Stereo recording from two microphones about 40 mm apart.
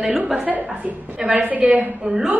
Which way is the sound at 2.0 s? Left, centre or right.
Right.